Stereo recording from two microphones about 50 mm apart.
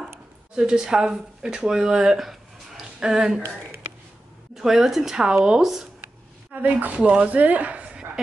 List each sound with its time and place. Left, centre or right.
0.6 s speech: centre
4.6 s speech: centre
6.5 s a woman's voice: right